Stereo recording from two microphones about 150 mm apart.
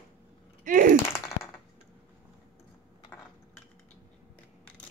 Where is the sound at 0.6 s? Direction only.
65° right (ahead or behind).